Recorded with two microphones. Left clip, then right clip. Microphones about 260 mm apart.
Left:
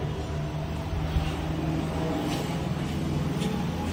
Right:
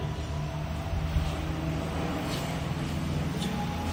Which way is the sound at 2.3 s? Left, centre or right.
Centre.